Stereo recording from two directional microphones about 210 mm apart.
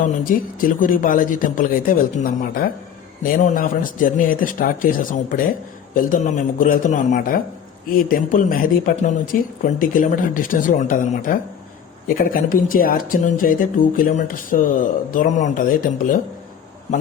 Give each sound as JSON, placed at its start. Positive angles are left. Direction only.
{"t": 0.3, "sound": "speech", "side_deg": 40}